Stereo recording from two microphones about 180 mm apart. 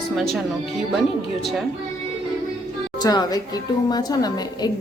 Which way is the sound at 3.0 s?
20° left (ahead or behind).